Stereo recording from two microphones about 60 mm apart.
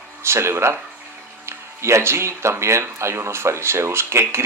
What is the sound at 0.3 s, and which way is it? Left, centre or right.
Speech, right.